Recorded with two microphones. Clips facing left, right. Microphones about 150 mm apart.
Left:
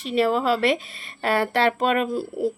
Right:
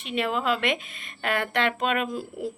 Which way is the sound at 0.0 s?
35° left (ahead or behind).